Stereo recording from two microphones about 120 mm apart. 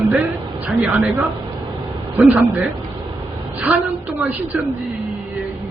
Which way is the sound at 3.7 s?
15° right (ahead or behind).